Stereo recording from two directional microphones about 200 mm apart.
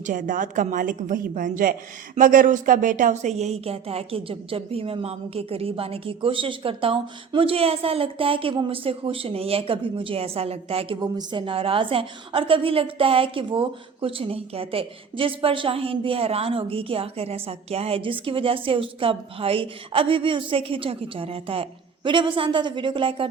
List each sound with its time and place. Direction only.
0.0 s a woman's voice: 40° right (ahead or behind)